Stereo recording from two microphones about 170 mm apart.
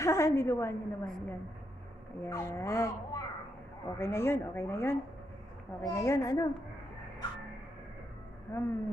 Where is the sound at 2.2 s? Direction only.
15° left (ahead or behind).